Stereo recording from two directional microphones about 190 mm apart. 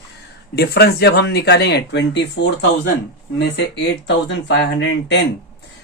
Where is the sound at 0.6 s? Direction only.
60° left (ahead or behind).